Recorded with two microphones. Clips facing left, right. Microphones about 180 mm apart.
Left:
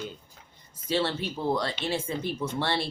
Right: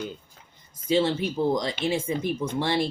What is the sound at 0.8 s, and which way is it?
Speech, 15° right (ahead or behind).